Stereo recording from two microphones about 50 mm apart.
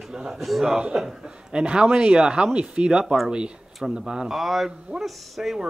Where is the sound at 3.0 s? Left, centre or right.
Centre.